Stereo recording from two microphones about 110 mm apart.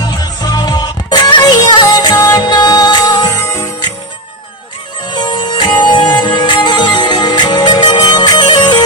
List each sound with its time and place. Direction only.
0.0 s music: 40° left (ahead or behind)
5.0 s music: 40° left (ahead or behind)